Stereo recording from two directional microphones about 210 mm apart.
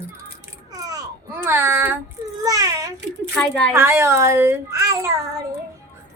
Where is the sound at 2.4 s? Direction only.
15° right (ahead or behind).